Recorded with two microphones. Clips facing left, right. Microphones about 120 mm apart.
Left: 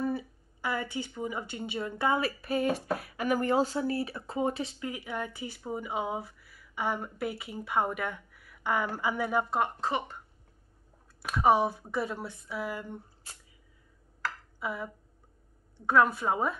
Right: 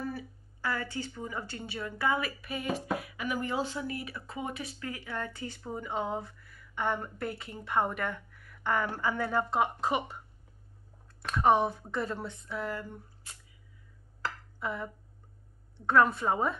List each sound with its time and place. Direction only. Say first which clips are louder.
0.0 s speech: left 6 dB; 20° left (ahead or behind)
9.8 s speech: right 1 dB; 15° right (ahead or behind)
11.2 s speech: left 1 dB; 5° left (ahead or behind)
12.9 s a sound: left 4 dB; 30° left (ahead or behind)
14.6 s speech: even; 5° left (ahead or behind)
15.9 s a woman's voice: even; 5° left (ahead or behind)